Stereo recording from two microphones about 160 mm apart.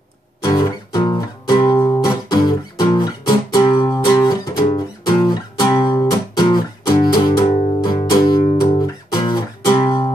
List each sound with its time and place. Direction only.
0.4 s music: 25° left (ahead or behind)